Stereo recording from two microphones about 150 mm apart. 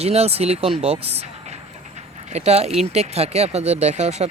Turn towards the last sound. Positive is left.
turn(degrees=-45)  # may be behind; listen again after turning